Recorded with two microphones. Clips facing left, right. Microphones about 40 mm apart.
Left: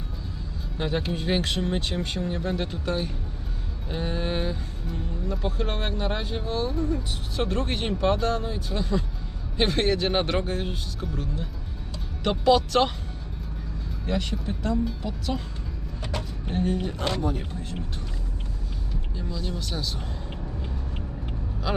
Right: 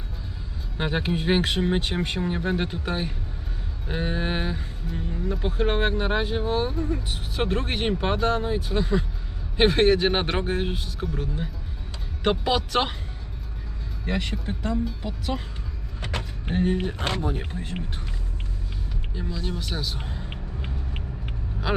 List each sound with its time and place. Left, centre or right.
0.8 s speech: right
14.1 s speech: right
16.5 s speech: right
19.1 s speech: right